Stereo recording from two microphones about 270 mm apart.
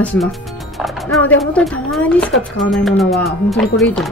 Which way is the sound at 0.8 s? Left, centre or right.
Centre.